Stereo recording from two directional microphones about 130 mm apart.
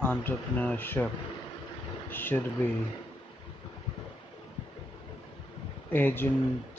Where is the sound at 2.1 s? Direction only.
15° left (ahead or behind).